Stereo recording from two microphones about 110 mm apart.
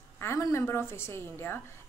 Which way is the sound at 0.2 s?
25° left (ahead or behind).